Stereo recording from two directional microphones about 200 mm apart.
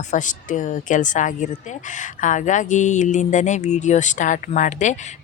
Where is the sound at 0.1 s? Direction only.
40° left (ahead or behind).